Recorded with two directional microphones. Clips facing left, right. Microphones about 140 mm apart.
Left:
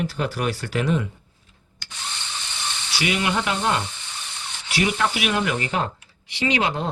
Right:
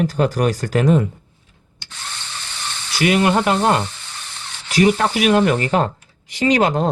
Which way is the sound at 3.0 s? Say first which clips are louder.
Right 8 dB; 50° right (ahead or behind).